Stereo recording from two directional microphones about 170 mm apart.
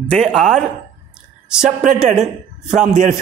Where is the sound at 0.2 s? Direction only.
Centre (ahead or behind).